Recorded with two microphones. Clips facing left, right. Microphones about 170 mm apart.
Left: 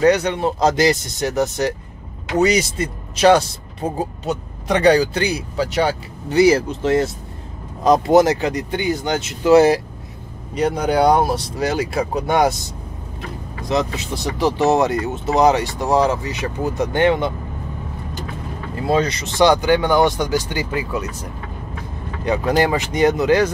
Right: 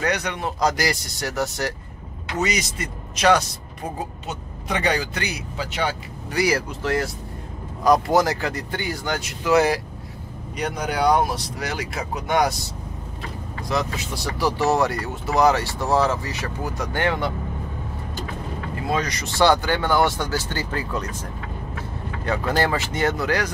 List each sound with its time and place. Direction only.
0.0 s speech: 30° left (ahead or behind)
2.3 s speech: 30° left (ahead or behind)
6.2 s speech: 25° left (ahead or behind)
13.6 s speech: 20° left (ahead or behind)
18.9 s speech: 25° left (ahead or behind)